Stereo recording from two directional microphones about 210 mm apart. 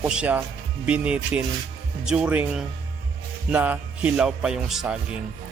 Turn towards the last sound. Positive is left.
turn(degrees=-5)  # may be behind; listen again after turning